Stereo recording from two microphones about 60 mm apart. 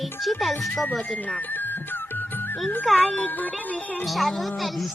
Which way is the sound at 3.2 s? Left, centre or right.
Left.